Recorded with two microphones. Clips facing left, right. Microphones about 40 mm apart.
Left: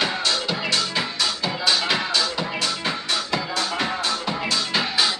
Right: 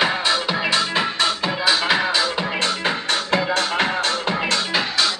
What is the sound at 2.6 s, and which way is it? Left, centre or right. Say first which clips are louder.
Music: right 4 dB; right.